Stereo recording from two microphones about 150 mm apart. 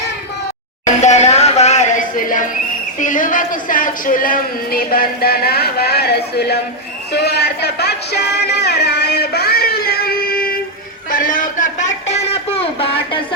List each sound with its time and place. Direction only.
1.0 s music: 50° left (ahead or behind)
3.0 s speech: 60° left (ahead or behind); by 6.6 s 90° left
7.1 s music: 90° left
11.1 s a sound: 65° left (ahead or behind); by 13.1 s 40° left (ahead or behind)